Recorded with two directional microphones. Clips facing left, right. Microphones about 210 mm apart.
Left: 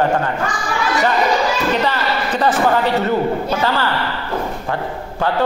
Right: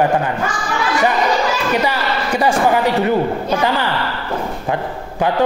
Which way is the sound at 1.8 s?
10° right (ahead or behind).